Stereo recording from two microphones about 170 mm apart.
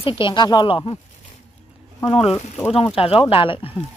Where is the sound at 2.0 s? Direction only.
35° left (ahead or behind).